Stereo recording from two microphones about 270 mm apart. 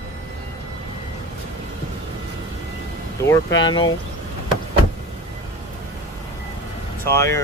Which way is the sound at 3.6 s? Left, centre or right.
Centre.